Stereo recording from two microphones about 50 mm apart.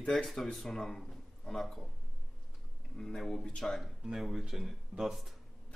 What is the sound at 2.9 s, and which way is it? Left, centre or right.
Speech, centre.